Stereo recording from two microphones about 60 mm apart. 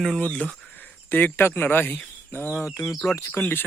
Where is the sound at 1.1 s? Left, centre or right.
Left.